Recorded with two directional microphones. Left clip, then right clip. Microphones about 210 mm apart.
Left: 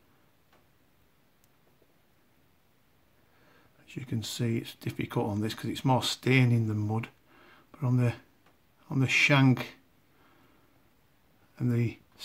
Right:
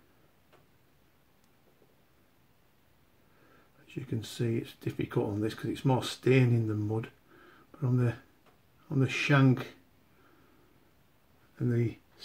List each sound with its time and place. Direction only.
3.8 s speech: 40° left (ahead or behind)
11.5 s speech: 45° left (ahead or behind)